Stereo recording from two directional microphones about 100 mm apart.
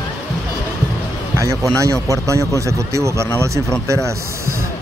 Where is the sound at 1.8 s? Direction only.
35° right (ahead or behind).